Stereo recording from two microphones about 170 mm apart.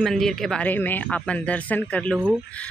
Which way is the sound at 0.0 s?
Centre (ahead or behind).